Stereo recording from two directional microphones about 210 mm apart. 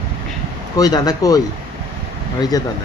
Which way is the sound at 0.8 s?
20° left (ahead or behind).